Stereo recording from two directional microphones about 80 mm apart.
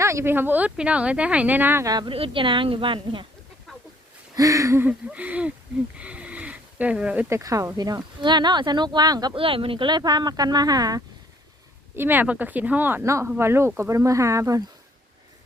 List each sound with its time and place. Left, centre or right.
0.0 s speech: right
1.8 s speech: right
2.0 s a woman's voice: right
3.7 s a sound: centre
4.4 s speech: right
4.8 s speech: centre
6.0 s a sound: centre
7.3 s speech: right
8.2 s speech: right
9.3 s speech: right
11.9 s speech: right
13.0 s speech: right